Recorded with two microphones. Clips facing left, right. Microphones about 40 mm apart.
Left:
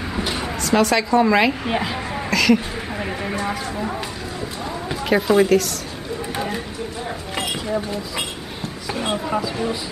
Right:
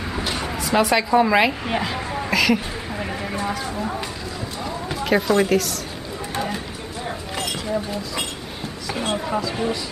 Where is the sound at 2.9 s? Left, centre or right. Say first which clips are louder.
Left 2 dB; centre.